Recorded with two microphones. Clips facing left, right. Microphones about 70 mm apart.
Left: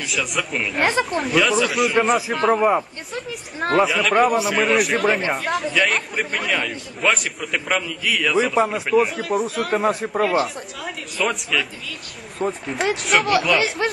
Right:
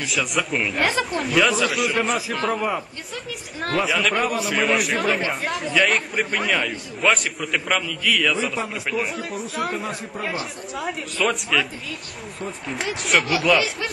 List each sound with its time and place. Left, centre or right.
0.1 s a man's voice: centre
9.7 s speech: left
10.1 s speech: left
10.4 s a man's voice: centre